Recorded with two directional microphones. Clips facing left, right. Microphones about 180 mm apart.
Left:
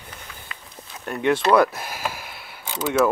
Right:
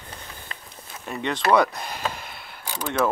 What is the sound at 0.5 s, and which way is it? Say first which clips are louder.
Walk: right 1 dB; 35° right (ahead or behind).